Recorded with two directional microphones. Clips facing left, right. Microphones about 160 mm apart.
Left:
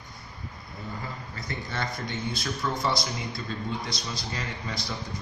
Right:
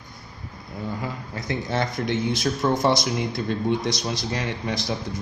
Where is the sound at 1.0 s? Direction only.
90° right.